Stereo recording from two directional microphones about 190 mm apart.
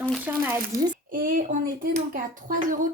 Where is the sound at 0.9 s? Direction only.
45° right (ahead or behind).